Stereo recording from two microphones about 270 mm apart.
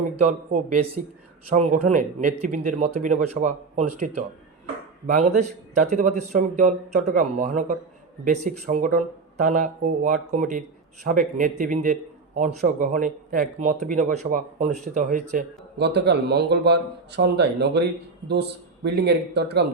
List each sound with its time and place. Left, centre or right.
0.3 s speech: right
5.0 s speech: right
18.9 s speech: right